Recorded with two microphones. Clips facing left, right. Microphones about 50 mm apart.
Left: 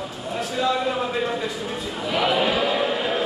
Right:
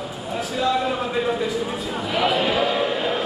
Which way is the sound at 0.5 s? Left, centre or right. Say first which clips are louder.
Right 1 dB; centre.